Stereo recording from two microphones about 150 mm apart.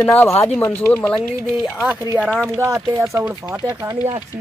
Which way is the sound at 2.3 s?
5° left (ahead or behind).